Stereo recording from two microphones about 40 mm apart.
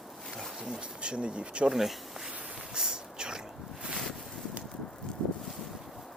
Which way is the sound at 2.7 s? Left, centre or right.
Centre.